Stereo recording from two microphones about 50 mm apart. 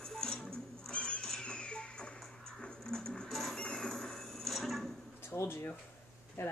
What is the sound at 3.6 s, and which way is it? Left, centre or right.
Music, centre.